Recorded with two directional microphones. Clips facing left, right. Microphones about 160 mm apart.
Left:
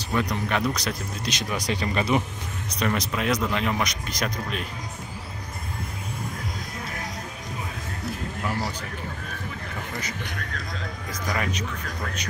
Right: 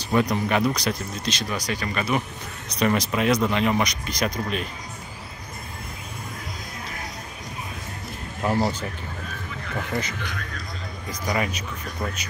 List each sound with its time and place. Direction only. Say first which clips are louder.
0.1 s speech: right 4 dB; 10° right (ahead or behind)
1.3 s speech: left 2 dB; 15° left (ahead or behind)
2.8 s speech: right 4 dB; 5° right (ahead or behind)
8.5 s speech: right 7 dB; 35° right (ahead or behind)
11.2 s speech: right 3 dB; 10° right (ahead or behind)